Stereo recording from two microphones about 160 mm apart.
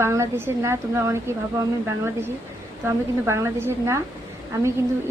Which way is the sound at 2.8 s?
15° right (ahead or behind).